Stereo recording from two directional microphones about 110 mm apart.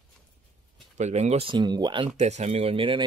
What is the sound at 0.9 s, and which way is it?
Speech, 90° right.